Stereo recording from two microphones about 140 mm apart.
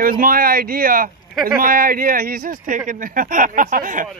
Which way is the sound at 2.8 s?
75° right (ahead or behind).